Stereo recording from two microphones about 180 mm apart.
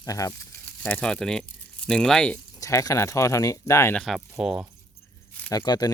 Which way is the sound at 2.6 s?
20° left (ahead or behind).